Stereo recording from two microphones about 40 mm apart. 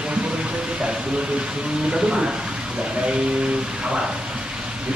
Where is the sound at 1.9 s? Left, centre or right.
Right.